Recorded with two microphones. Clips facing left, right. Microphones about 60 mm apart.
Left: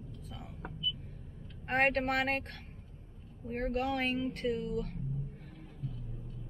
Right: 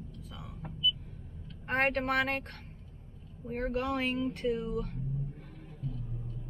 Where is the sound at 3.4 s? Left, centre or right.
Centre.